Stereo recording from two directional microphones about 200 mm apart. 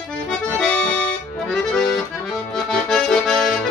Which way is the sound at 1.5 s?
Centre (ahead or behind).